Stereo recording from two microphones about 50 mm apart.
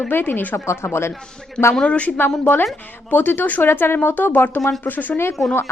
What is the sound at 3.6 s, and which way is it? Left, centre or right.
A woman's voice, left.